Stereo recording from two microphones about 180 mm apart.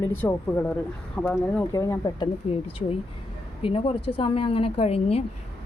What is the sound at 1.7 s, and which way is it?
A woman's voice, 20° left (ahead or behind).